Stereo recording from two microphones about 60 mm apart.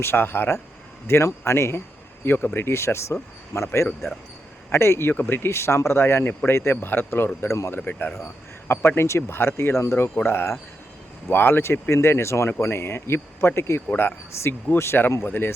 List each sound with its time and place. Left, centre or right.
0.0 s speech: left
2.2 s speech: left
4.7 s speech: left
7.4 s speech: left
7.9 s speech: left